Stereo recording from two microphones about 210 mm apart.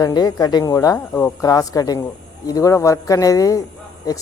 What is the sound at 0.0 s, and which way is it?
Speech, 15° left (ahead or behind).